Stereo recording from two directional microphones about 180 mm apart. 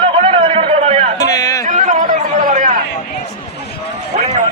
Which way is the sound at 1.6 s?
45° right (ahead or behind).